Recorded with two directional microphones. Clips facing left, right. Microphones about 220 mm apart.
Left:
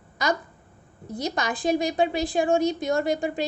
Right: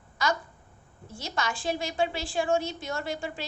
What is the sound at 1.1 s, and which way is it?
A woman's voice, 20° left (ahead or behind).